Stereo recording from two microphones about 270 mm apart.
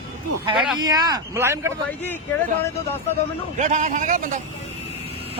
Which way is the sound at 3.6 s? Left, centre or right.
Right.